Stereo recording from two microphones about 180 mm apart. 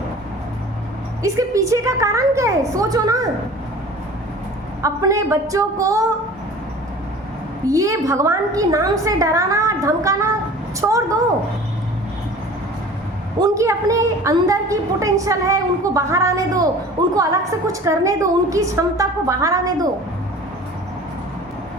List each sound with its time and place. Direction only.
1.2 s a woman's voice: 20° right (ahead or behind)
4.8 s a woman's voice: 15° right (ahead or behind)
7.7 s a woman's voice: 15° right (ahead or behind)
13.4 s a woman's voice: 15° right (ahead or behind)